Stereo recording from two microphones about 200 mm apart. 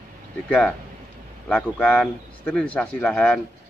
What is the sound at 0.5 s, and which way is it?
Speech, 5° left (ahead or behind).